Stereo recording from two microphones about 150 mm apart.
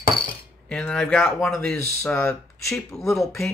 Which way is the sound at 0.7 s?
5° left (ahead or behind).